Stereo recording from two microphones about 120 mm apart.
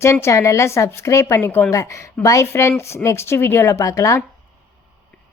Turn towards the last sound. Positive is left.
turn(degrees=25)  # may be behind; listen again after turning